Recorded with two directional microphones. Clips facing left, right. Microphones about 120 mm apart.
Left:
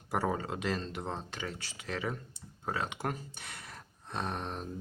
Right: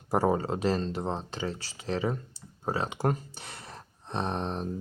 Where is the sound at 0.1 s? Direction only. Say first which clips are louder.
Right 7 dB; 35° right (ahead or behind).